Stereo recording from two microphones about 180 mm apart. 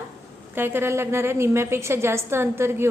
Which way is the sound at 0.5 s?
10° right (ahead or behind).